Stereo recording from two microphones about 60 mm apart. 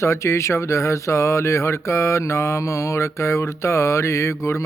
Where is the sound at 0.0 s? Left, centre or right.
Left.